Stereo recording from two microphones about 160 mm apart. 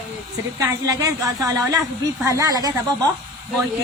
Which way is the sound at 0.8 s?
20° right (ahead or behind).